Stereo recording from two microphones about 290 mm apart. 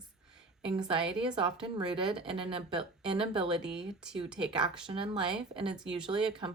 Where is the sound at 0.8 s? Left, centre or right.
Centre.